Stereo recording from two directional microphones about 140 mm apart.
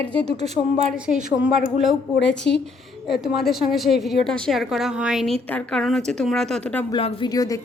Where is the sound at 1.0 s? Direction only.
5° right (ahead or behind).